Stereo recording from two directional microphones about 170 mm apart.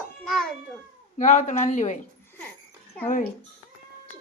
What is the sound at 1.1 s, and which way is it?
Speech, 45° left (ahead or behind).